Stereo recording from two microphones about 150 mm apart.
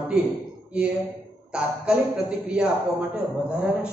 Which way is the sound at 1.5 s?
5° right (ahead or behind).